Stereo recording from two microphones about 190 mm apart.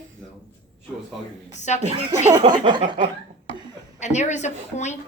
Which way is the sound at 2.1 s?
20° right (ahead or behind).